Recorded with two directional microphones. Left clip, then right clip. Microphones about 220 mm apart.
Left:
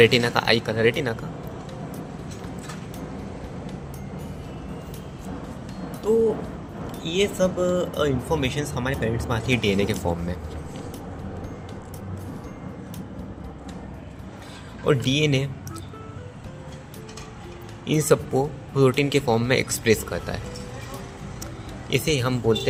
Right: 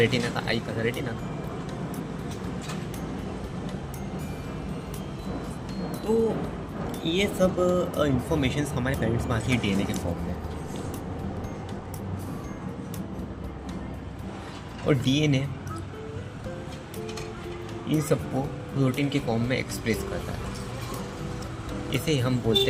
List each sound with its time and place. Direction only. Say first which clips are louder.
0.0 s speech: left 8 dB; 35° left (ahead or behind)
7.0 s speech: left 2 dB; 15° left (ahead or behind)
14.8 s speech: left 3 dB; 25° left (ahead or behind)
17.8 s speech: left 6 dB; 35° left (ahead or behind)
21.8 s speech: left 4 dB; 25° left (ahead or behind)